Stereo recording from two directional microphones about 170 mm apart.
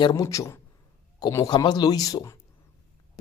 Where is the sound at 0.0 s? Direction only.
20° left (ahead or behind).